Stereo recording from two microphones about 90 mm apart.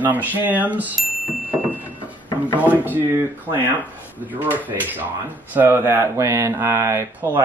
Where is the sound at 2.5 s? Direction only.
20° right (ahead or behind).